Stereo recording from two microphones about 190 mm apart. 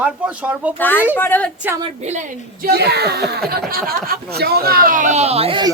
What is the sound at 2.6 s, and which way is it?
Speech, 55° right (ahead or behind).